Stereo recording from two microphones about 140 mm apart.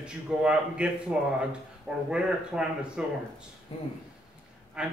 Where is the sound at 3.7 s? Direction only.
45° left (ahead or behind).